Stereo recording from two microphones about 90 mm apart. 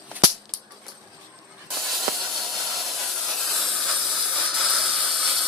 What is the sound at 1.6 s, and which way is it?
Steam, centre (ahead or behind).